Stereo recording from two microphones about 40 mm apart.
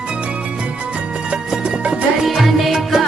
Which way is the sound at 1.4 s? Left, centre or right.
Centre.